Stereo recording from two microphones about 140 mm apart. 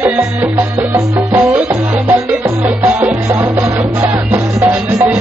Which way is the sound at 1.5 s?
15° right (ahead or behind).